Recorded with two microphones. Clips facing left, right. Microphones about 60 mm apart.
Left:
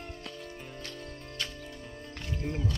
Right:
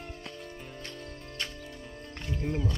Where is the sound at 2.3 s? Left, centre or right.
Centre.